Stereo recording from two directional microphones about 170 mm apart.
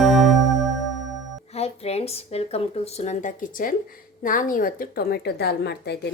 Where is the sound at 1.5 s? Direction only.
40° left (ahead or behind).